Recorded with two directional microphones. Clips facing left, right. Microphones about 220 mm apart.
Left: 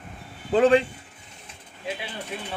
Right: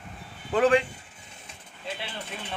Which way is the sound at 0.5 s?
30° left (ahead or behind).